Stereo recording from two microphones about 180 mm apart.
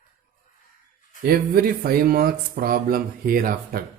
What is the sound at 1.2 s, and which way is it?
Speech, 55° right (ahead or behind).